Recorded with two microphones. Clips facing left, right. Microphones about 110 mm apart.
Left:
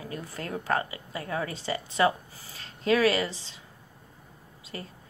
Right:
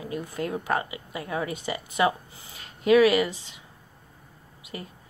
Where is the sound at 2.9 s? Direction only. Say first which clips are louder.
Right 5 dB; 15° right (ahead or behind).